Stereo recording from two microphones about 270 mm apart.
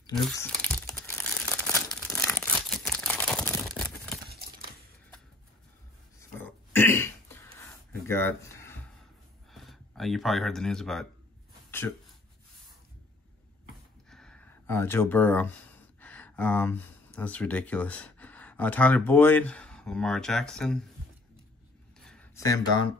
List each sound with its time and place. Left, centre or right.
0.1 s crumpling: centre
4.3 s crumpling: right
6.3 s throat clearing: centre
8.1 s speech: centre
14.1 s a sound: centre
16.0 s speech: centre
22.0 s a sound: centre